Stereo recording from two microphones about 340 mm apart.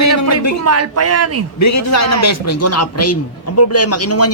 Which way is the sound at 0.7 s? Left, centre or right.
Right.